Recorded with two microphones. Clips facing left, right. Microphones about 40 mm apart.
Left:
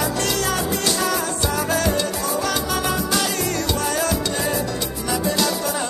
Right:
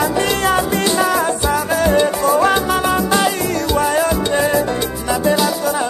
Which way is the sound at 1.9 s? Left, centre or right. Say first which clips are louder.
Right 9 dB; right.